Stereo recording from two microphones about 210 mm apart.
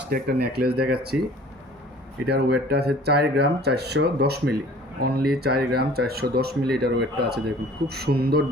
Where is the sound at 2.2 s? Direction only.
50° right (ahead or behind).